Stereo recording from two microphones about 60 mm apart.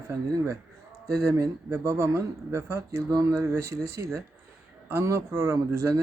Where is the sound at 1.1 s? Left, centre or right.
Right.